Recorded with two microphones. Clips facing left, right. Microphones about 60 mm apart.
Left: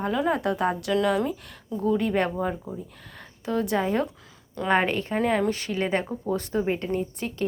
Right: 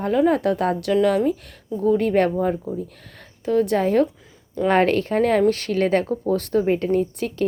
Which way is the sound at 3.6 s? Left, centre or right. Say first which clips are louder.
Right 5 dB; right.